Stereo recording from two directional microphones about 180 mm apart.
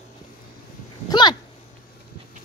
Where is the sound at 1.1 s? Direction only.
25° left (ahead or behind).